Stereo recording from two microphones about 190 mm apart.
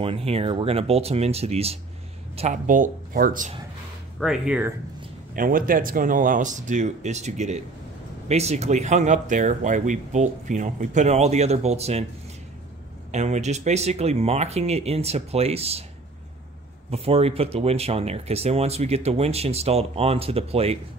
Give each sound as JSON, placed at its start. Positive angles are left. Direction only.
{"t": 0.0, "sound": "speech", "side_deg": -30}
{"t": 4.2, "sound": "speech", "side_deg": -5}
{"t": 5.3, "sound": "speech", "side_deg": -45}
{"t": 13.1, "sound": "speech", "side_deg": -35}
{"t": 16.9, "sound": "speech", "side_deg": -30}